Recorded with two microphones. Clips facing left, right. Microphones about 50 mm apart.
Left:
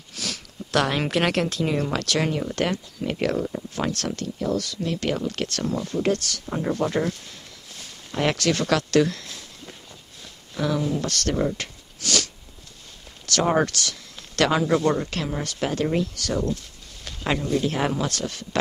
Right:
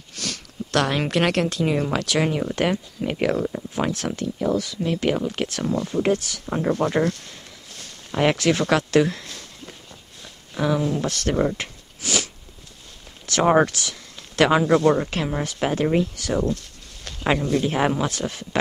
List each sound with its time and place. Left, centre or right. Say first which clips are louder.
0.1 s speech: right 1 dB; centre
8.1 s speech: right 3 dB; centre
10.5 s speech: right 2 dB; centre
13.3 s speech: right 4 dB; right
14.7 s speech: right 4 dB; centre
15.0 s speech: right 3 dB; centre
17.2 s a sound: right 4 dB; centre
17.6 s speech: right 2 dB; centre